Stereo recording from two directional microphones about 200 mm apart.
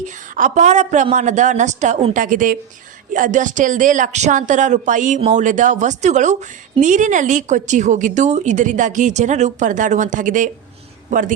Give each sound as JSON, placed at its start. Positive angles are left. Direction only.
{"t": 0.0, "sound": "a woman's voice", "side_deg": -40}